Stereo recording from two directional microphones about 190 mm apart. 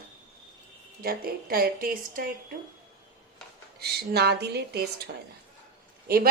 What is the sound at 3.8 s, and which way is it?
A woman's voice, 60° right (ahead or behind).